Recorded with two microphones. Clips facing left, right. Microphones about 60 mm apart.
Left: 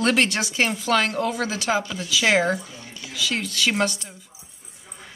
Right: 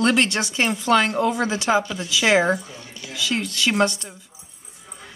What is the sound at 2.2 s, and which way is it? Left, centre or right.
Speech, centre.